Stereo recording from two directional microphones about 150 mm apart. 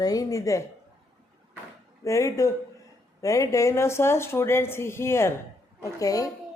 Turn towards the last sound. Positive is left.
turn(degrees=25)  # may be behind; listen again after turning